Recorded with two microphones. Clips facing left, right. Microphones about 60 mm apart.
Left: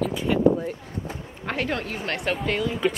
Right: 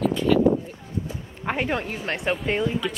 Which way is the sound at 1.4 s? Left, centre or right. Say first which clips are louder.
Right 2 dB; centre.